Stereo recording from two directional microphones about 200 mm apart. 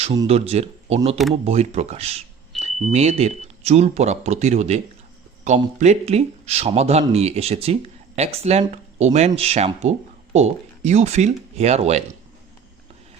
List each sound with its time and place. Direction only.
0.0 s speech: 25° right (ahead or behind)